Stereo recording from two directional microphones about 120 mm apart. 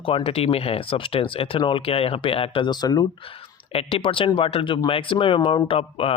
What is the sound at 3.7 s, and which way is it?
Speech, 50° left (ahead or behind).